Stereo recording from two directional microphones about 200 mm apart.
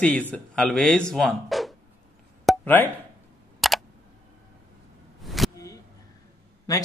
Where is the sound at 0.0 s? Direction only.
5° left (ahead or behind).